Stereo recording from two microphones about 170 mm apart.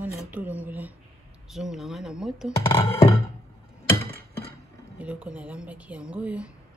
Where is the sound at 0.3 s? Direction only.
10° right (ahead or behind).